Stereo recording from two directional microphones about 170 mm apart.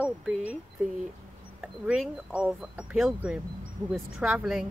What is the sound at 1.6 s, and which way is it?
Speech, 5° right (ahead or behind).